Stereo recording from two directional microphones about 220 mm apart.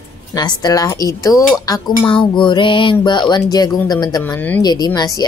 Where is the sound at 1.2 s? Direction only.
15° left (ahead or behind).